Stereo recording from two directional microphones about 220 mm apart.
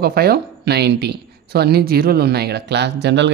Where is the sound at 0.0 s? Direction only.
45° right (ahead or behind).